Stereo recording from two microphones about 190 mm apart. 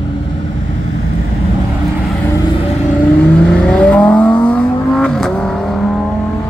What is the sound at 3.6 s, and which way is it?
Vehicle, 5° left (ahead or behind).